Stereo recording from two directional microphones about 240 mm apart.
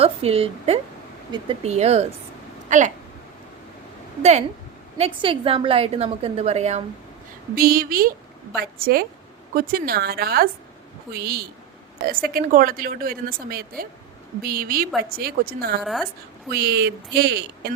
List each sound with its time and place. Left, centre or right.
0.0 s a woman's voice: right
4.2 s a woman's voice: right
7.5 s speech: right
15.8 s a woman's voice: centre
16.5 s speech: right